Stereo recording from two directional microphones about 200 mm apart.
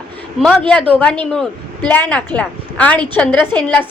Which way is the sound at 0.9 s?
5° left (ahead or behind).